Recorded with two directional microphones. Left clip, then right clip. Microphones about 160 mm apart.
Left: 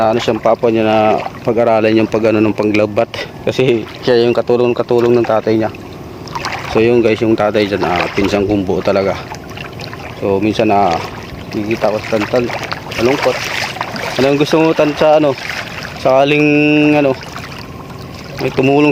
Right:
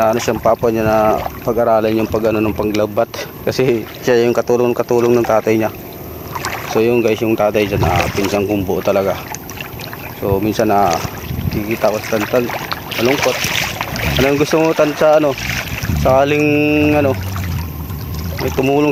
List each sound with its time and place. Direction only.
0.0 s speech: centre (ahead or behind)
0.7 s speech: 15° left (ahead or behind)
3.4 s speech: 5° left (ahead or behind)
6.3 s boat: 45° right (ahead or behind)
6.7 s speech: 10° left (ahead or behind)
7.9 s speech: 90° right
8.3 s speech: 15° left (ahead or behind)
10.2 s speech: centre (ahead or behind)
12.7 s boat: 35° right (ahead or behind)
14.3 s speech: 5° left (ahead or behind)
15.4 s speech: 50° right (ahead or behind)
16.0 s speech: 5° left (ahead or behind)
18.5 s speech: 15° left (ahead or behind)